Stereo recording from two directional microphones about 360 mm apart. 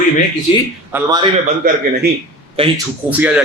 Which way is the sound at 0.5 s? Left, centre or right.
Centre.